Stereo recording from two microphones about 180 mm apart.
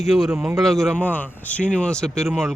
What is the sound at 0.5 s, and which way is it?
Speech, centre (ahead or behind).